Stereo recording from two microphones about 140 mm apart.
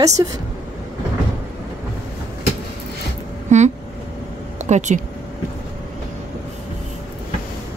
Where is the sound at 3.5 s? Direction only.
60° right (ahead or behind).